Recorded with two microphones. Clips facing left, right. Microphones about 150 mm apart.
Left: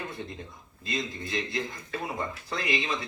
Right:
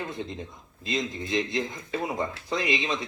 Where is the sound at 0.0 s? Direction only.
20° right (ahead or behind).